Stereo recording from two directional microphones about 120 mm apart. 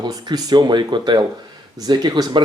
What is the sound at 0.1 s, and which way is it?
Speech, 35° right (ahead or behind).